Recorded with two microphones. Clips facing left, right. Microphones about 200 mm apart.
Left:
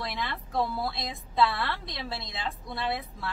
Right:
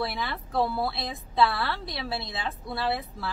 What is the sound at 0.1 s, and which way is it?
A woman's voice, centre (ahead or behind).